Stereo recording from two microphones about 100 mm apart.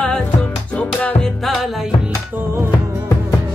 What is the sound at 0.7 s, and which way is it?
Music, 10° left (ahead or behind).